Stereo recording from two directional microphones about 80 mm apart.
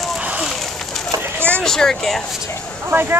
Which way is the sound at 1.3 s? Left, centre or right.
Right.